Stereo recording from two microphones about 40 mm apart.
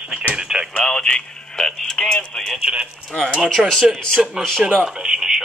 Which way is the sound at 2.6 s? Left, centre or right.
Right.